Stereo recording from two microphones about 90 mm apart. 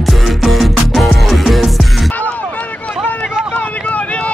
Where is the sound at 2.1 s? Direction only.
15° left (ahead or behind).